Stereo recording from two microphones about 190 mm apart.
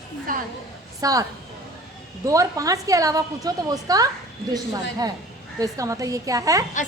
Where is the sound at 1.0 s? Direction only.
20° right (ahead or behind).